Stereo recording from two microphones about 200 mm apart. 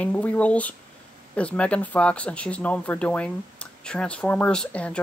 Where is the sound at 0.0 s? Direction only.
5° left (ahead or behind).